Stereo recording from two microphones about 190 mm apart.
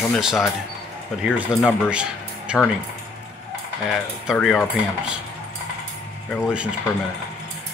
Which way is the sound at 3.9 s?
Centre (ahead or behind).